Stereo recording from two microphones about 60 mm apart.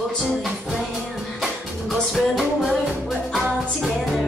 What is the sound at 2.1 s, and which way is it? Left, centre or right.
Music, centre.